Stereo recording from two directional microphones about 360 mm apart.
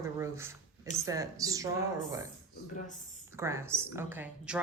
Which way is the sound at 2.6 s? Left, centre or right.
Left.